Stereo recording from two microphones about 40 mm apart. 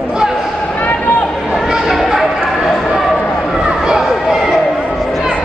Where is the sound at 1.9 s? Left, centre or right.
Centre.